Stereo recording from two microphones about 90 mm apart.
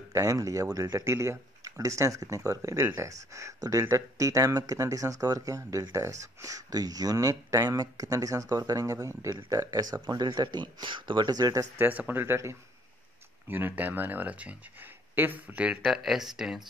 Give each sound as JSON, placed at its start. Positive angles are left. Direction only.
{"t": 0.1, "sound": "speech", "side_deg": -40}
{"t": 11.8, "sound": "speech", "side_deg": -20}
{"t": 15.8, "sound": "speech", "side_deg": -5}